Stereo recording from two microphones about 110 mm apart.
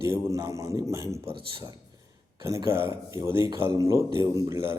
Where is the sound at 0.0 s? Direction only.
25° right (ahead or behind).